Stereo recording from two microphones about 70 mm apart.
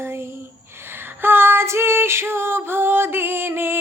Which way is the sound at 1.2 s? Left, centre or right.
Right.